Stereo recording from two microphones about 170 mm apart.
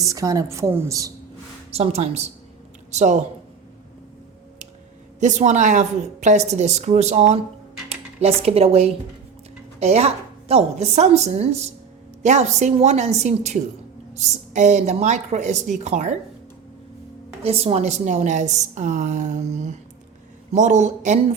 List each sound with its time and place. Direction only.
0.0 s a woman's voice: 20° right (ahead or behind)
1.7 s a woman's voice: 40° right (ahead or behind)
5.2 s a woman's voice: 45° right (ahead or behind)
17.4 s a woman's voice: 35° right (ahead or behind)